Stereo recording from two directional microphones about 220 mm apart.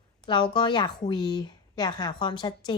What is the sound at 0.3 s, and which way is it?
A woman's voice, 20° left (ahead or behind).